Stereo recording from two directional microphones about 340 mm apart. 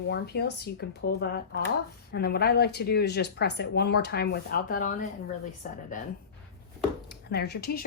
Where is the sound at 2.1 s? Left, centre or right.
Left.